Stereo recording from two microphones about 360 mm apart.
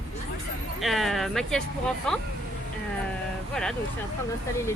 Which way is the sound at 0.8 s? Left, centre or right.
Centre.